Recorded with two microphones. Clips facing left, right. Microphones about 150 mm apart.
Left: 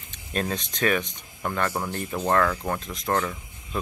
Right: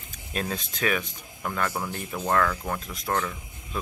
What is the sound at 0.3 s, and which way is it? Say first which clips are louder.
Speech: left 3 dB; 5° right (ahead or behind).